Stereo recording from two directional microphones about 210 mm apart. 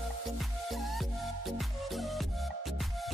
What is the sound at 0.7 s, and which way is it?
Music, centre (ahead or behind).